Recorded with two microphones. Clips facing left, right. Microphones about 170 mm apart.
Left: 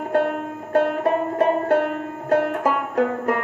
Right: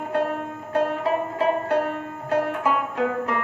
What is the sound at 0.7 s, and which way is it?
Music, 50° left (ahead or behind).